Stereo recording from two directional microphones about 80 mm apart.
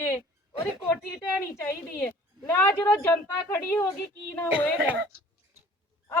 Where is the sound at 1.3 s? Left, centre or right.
Left.